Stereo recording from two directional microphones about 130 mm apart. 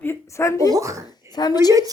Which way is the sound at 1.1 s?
35° left (ahead or behind).